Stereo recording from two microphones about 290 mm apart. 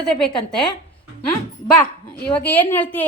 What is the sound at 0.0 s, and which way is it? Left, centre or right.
Speech, centre.